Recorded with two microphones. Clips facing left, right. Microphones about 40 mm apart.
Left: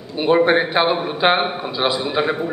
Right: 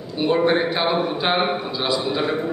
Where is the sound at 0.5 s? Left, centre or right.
Left.